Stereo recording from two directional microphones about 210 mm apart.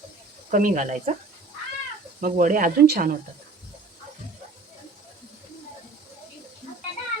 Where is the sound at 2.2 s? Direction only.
40° right (ahead or behind).